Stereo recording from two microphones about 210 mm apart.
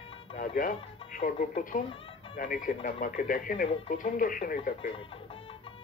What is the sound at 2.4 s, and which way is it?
Speech, 40° left (ahead or behind).